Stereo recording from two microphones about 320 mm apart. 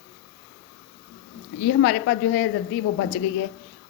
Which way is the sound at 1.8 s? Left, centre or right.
Left.